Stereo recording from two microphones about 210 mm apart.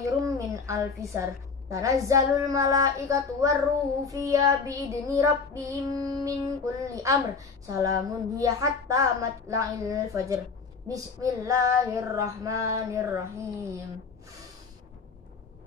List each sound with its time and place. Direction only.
0.0 s a woman's voice: 15° right (ahead or behind)
4.1 s child singing: 15° right (ahead or behind)